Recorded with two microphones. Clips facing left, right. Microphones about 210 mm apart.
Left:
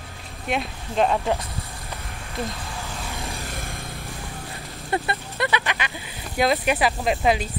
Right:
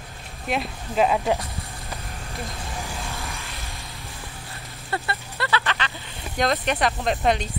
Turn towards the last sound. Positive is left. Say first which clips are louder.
# left 1 dB
turn(degrees=5)  # may be behind; listen again after turning